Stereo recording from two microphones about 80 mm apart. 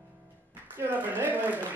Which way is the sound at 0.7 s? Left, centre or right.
Right.